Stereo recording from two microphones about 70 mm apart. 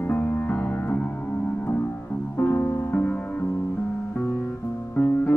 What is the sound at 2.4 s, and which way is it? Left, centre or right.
Music, left.